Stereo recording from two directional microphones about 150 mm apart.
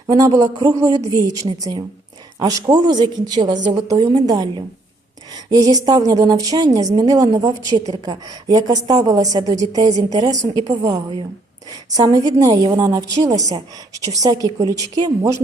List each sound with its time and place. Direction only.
0.1 s a woman's voice: 25° right (ahead or behind)